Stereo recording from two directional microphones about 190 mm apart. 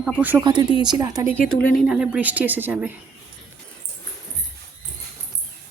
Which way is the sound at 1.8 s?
5° right (ahead or behind).